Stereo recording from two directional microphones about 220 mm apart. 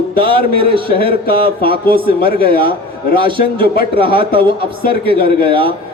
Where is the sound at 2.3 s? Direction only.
45° left (ahead or behind).